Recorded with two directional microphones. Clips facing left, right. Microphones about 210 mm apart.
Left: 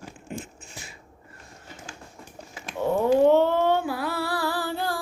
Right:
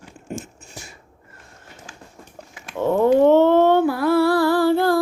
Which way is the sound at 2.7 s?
55° right (ahead or behind).